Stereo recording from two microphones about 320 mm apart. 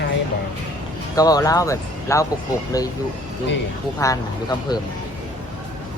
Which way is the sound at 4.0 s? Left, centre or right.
Centre.